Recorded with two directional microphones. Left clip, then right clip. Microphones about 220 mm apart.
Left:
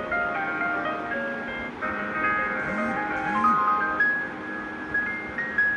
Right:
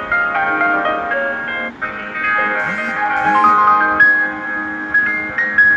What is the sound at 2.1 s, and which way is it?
Music, 50° right (ahead or behind).